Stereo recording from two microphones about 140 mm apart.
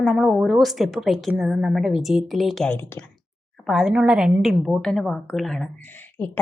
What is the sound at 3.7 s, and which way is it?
A woman's voice, centre (ahead or behind).